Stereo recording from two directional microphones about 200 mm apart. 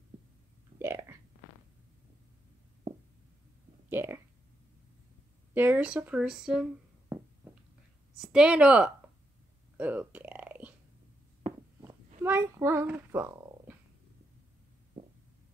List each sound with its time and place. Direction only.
0.7 s speech: 15° right (ahead or behind)
3.9 s speech: 10° right (ahead or behind)
5.5 s speech: 10° right (ahead or behind)
7.1 s a sound: 10° right (ahead or behind)
8.2 s speech: 5° right (ahead or behind)
9.8 s a sound: 10° right (ahead or behind)
12.2 s speech: 10° right (ahead or behind)